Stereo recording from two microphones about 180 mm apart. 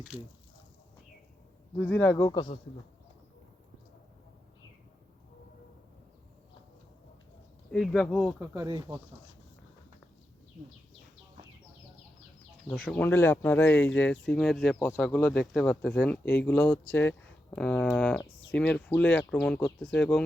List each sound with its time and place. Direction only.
1.7 s speech: 5° left (ahead or behind); by 2.6 s 25° left (ahead or behind)
7.7 s speech: centre (ahead or behind)
8.4 s speech: 20° right (ahead or behind)
12.6 s speech: 5° left (ahead or behind)